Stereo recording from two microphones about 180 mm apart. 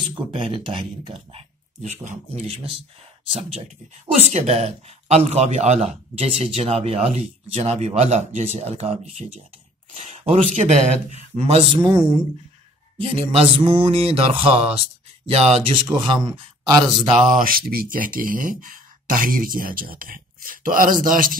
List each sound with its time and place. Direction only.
0.1 s speech: 30° right (ahead or behind)
10.0 s speech: 35° right (ahead or behind)
17.3 s speech: 50° right (ahead or behind)